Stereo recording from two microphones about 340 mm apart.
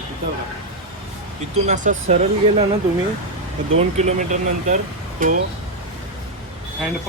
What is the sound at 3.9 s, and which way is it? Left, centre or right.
Speech, right.